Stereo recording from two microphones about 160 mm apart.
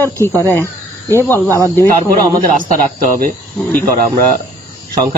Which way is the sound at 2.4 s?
60° right (ahead or behind).